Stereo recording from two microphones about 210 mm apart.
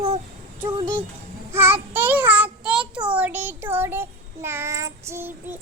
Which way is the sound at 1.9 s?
10° right (ahead or behind).